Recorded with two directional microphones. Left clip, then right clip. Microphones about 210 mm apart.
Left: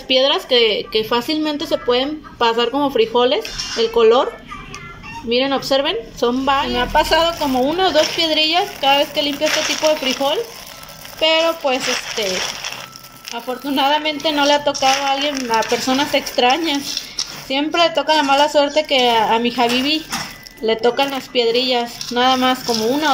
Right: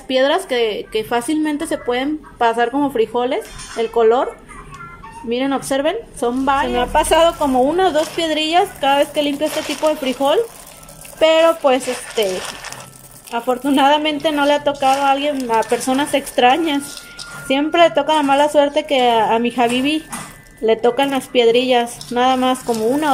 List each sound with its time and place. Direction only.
0.1 s a woman's voice: 5° right (ahead or behind)
0.6 s speech: 25° right (ahead or behind)
0.9 s a woman's voice: centre (ahead or behind)
5.3 s a woman's voice: centre (ahead or behind)